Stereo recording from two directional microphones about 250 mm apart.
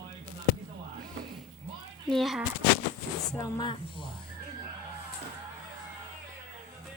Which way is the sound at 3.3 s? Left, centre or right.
Centre.